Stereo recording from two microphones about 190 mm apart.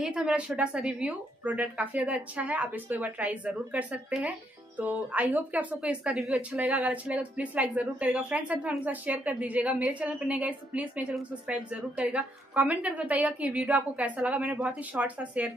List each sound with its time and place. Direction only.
0.0 s a woman's voice: 5° right (ahead or behind)